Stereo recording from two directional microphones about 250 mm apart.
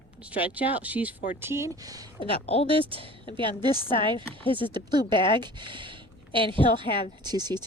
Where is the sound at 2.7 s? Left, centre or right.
Right.